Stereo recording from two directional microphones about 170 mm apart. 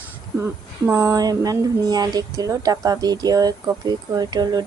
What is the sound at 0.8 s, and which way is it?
Speech, 15° right (ahead or behind).